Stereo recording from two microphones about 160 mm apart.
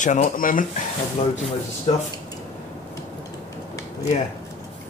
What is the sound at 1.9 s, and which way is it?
Speech, 40° left (ahead or behind).